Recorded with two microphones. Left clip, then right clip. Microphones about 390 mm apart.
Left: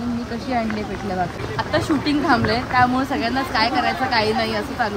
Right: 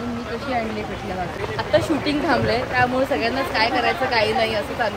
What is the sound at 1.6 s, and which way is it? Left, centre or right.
Speech, centre.